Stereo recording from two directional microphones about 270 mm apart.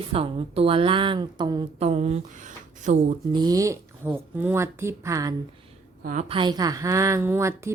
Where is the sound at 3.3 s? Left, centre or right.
Centre.